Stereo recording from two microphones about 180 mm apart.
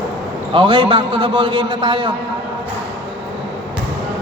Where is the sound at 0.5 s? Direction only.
30° right (ahead or behind).